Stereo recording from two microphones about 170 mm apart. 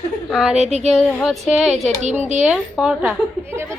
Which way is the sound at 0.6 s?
40° right (ahead or behind).